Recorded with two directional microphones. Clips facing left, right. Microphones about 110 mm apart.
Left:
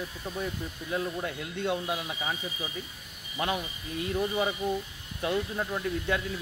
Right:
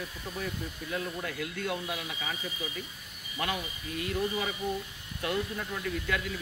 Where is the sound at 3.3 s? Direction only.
25° left (ahead or behind).